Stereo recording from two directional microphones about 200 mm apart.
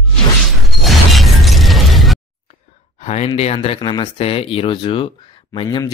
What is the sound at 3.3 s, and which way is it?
Speech, 25° left (ahead or behind).